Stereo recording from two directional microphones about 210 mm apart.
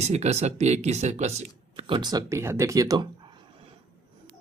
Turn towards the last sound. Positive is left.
turn(degrees=-15)  # may be behind; listen again after turning